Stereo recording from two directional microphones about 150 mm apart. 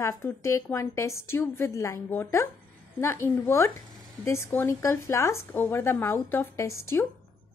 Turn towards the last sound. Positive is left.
turn(degrees=15)  # may be behind; listen again after turning